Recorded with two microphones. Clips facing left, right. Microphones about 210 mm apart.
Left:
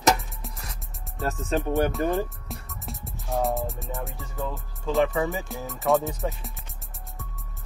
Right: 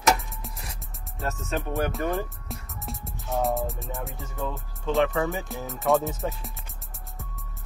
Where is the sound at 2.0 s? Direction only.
30° left (ahead or behind).